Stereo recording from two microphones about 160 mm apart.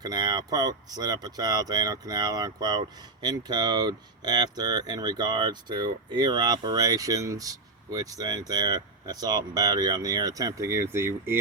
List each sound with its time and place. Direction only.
0.0 s speech: 25° right (ahead or behind)